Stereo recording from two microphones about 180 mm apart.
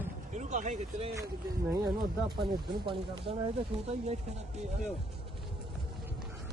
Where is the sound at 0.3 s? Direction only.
40° right (ahead or behind).